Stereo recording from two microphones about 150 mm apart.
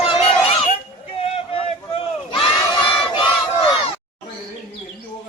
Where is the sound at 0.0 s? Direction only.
40° left (ahead or behind).